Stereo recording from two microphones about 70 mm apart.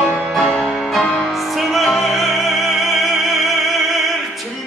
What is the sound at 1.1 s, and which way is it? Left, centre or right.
Opera, centre.